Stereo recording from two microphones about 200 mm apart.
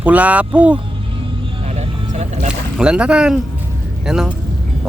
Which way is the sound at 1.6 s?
30° right (ahead or behind).